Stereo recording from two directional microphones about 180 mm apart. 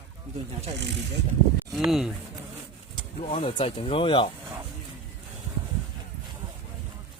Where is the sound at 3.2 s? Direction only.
35° left (ahead or behind).